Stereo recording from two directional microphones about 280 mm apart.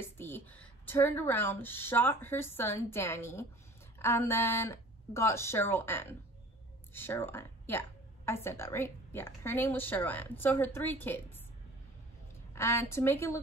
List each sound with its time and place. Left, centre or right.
0.0 s speech: centre
12.5 s speech: centre